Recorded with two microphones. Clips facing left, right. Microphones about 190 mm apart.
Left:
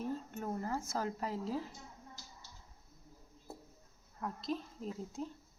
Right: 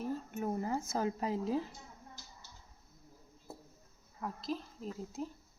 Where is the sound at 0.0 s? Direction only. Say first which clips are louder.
Right 2 dB; 10° right (ahead or behind).